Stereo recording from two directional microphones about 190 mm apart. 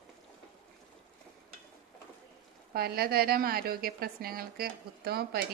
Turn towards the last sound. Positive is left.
turn(degrees=-55)  # may be behind; listen again after turning